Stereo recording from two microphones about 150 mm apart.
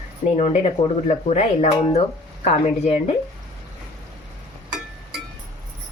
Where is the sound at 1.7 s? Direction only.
35° left (ahead or behind).